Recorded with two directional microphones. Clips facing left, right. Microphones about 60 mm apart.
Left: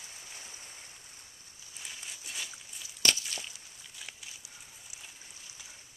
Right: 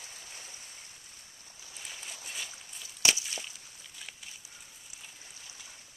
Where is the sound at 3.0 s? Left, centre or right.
Centre.